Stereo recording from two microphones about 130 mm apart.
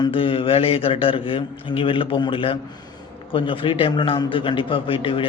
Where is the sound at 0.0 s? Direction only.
45° left (ahead or behind).